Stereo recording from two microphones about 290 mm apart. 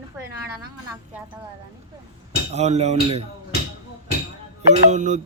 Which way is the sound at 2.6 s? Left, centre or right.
Right.